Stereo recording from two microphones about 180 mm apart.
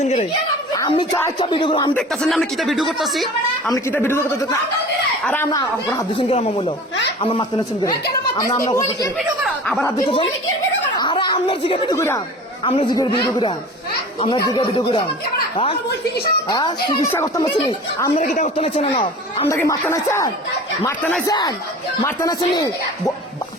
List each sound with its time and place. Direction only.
0.0 s speech: 35° left (ahead or behind)
1.9 s speech: 5° left (ahead or behind)
3.7 s speech: 15° left (ahead or behind)
9.1 s a sound: centre (ahead or behind)
10.9 s chatter: 25° left (ahead or behind)
11.9 s speech: 15° left (ahead or behind)
12.6 s speech: 25° left (ahead or behind)
16.5 s speech: 25° left (ahead or behind)
18.3 s speech: 35° left (ahead or behind)
19.5 s speech: 15° left (ahead or behind)